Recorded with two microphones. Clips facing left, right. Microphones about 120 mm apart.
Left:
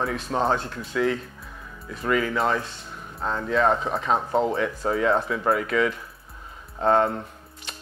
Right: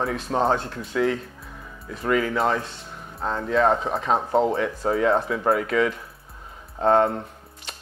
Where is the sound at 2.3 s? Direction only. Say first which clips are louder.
Right 1 dB; 30° right (ahead or behind).